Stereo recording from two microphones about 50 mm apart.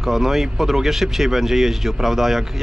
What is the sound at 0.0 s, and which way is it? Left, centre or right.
Speech, centre.